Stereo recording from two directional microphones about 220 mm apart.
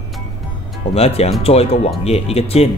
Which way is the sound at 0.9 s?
30° left (ahead or behind).